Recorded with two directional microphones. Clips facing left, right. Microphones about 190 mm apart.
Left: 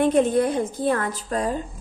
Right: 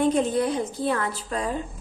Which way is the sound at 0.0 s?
55° left (ahead or behind).